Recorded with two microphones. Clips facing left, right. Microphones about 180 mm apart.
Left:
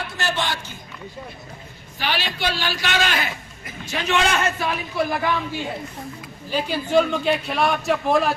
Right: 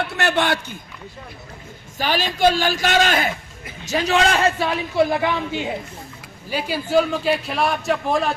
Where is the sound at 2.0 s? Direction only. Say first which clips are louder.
Right 7 dB; 45° right (ahead or behind).